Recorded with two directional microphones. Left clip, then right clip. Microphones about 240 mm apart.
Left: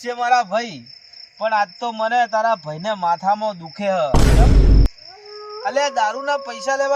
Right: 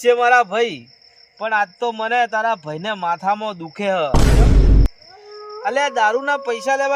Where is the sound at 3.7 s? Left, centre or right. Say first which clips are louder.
Right 1 dB; centre.